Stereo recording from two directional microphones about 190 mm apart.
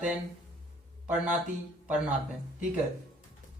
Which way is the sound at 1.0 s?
5° right (ahead or behind).